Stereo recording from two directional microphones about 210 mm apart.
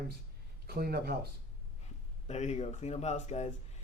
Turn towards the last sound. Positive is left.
turn(degrees=30)  # may be behind; listen again after turning